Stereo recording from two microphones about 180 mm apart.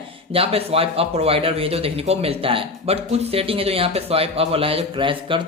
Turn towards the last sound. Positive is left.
turn(degrees=-30)  # may be behind; listen again after turning